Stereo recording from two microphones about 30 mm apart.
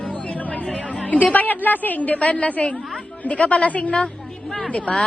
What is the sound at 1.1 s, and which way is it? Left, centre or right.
A woman's voice, left.